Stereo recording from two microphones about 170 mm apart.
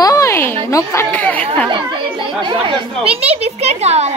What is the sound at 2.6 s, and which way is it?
A woman's voice, 30° right (ahead or behind).